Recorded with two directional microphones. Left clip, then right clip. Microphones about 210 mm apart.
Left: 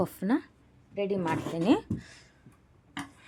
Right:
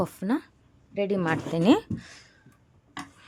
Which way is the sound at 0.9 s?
35° right (ahead or behind).